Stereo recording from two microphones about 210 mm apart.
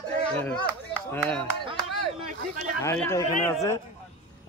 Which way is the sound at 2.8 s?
15° left (ahead or behind).